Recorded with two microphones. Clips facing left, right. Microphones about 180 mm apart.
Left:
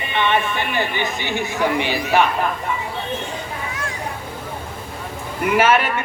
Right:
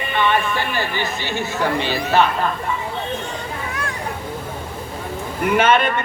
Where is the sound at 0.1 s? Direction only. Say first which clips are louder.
Even; 20° left (ahead or behind).